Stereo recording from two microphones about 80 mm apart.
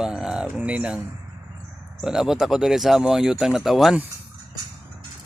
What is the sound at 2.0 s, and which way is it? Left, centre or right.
Speech, centre.